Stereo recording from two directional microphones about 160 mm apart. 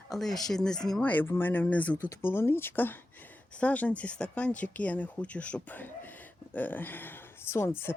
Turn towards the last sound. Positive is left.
turn(degrees=15)  # may be behind; listen again after turning